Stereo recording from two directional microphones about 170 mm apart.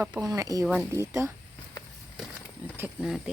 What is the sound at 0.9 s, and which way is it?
Speech, 15° right (ahead or behind).